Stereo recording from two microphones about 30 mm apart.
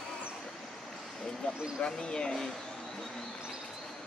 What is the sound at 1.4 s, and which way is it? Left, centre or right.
Speech, left.